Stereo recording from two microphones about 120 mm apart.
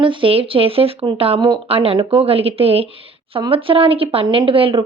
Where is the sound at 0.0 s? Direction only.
45° right (ahead or behind).